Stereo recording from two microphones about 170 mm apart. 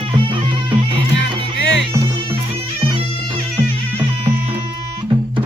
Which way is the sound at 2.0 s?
30° right (ahead or behind).